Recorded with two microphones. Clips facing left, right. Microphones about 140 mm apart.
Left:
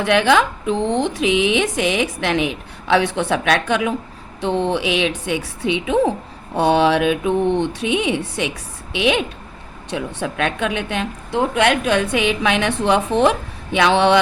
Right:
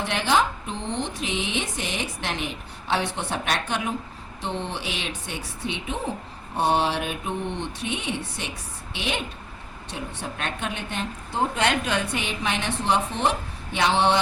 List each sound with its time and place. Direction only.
0.0 s speech: 75° left (ahead or behind)
4.4 s a woman's voice: 60° left (ahead or behind)